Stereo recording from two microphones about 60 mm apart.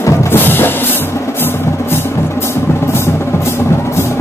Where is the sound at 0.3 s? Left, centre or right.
Left.